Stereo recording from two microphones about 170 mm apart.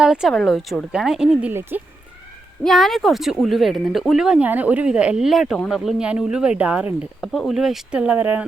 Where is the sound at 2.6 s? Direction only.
Centre (ahead or behind).